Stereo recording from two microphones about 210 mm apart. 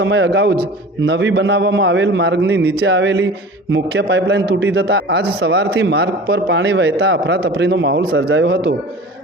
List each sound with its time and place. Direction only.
0.0 s a man's voice: 55° right (ahead or behind)